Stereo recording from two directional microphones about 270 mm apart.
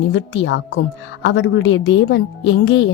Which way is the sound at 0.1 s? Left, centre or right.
Left.